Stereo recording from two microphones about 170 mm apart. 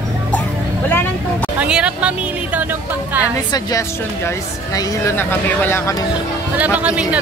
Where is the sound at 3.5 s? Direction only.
20° left (ahead or behind).